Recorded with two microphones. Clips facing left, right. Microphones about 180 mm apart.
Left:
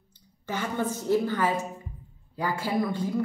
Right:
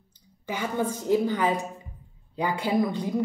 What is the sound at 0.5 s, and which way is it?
A woman's voice, 10° right (ahead or behind).